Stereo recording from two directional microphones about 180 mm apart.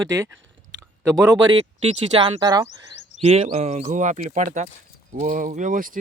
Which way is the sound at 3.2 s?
35° right (ahead or behind).